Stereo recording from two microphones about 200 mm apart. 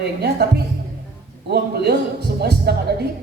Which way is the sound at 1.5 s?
55° right (ahead or behind).